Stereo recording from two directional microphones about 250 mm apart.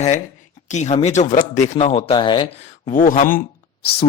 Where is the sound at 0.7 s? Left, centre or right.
Left.